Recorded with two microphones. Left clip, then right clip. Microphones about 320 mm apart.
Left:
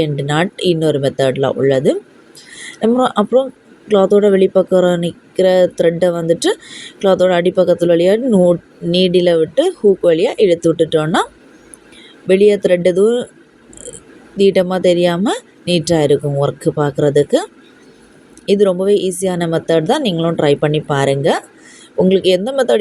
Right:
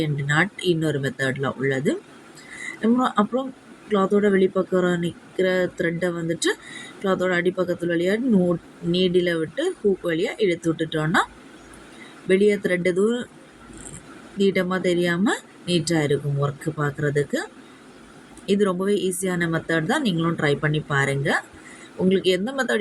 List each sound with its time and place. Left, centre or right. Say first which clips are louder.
0.0 s speech: left 6 dB; centre
12.3 s speech: left 9 dB; centre
14.3 s speech: left 9 dB; centre